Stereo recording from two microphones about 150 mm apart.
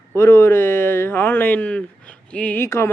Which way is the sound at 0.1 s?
15° left (ahead or behind).